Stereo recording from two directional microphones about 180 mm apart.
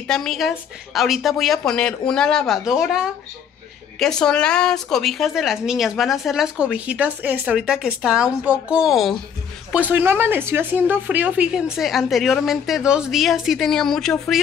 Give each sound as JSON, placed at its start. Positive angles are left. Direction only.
{"t": 0.0, "sound": "a woman's voice", "side_deg": 5}